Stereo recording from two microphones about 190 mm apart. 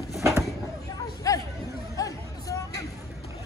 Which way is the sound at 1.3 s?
20° left (ahead or behind).